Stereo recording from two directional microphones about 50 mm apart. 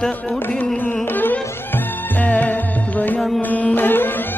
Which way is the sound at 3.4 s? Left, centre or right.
Left.